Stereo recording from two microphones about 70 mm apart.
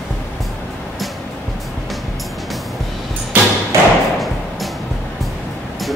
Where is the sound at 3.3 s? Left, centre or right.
Right.